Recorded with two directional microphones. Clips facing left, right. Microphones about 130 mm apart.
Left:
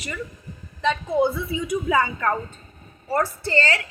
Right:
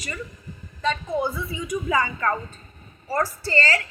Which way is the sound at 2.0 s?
35° left (ahead or behind).